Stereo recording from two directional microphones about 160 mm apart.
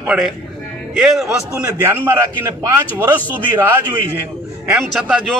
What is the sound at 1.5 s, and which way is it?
A man's voice, 15° right (ahead or behind).